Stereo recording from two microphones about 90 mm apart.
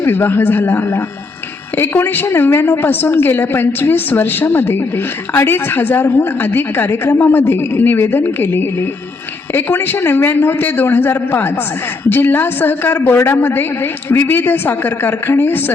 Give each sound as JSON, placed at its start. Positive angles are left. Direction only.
{"t": 0.0, "sound": "a woman's voice", "side_deg": 25}